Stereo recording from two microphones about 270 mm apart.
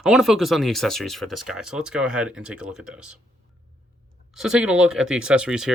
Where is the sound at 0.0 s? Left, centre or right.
Centre.